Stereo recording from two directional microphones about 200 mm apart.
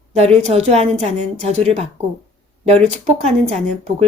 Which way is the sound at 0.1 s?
35° right (ahead or behind).